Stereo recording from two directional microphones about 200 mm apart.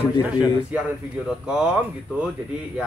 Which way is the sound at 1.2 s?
5° right (ahead or behind).